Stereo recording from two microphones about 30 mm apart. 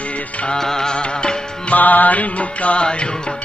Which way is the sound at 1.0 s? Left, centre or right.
Left.